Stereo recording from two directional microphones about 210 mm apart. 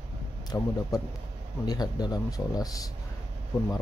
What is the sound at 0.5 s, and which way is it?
Speech, 15° left (ahead or behind).